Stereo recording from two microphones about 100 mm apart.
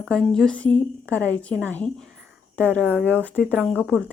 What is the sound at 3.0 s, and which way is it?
Speech, 15° left (ahead or behind).